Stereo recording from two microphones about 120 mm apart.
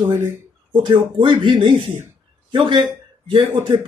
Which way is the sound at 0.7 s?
40° right (ahead or behind).